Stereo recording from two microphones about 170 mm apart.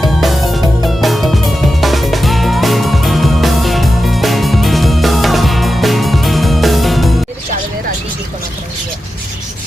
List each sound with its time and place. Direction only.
0.0 s music: centre (ahead or behind)